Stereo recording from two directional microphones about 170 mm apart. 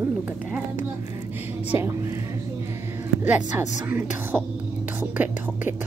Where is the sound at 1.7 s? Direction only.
15° right (ahead or behind).